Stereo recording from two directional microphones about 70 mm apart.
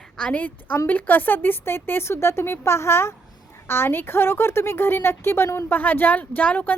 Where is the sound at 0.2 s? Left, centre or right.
Centre; by 5.7 s left.